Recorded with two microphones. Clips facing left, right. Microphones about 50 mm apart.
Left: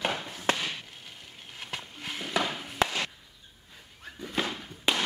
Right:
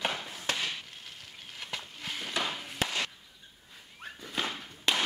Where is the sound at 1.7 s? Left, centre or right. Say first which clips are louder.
Left 1 dB; centre.